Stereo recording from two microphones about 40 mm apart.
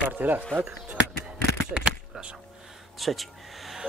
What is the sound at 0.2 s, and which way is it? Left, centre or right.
Speech, right.